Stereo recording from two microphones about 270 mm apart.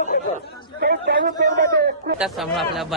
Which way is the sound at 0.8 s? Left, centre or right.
Right.